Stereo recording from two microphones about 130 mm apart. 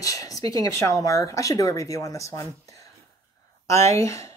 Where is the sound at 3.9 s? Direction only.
20° left (ahead or behind).